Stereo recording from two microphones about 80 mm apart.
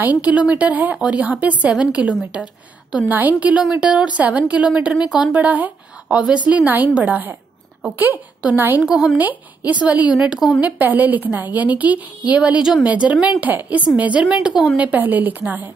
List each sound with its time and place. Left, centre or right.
0.0 s a woman's voice: centre
8.8 s speech: centre
9.1 s a woman's voice: centre
14.8 s a woman's voice: right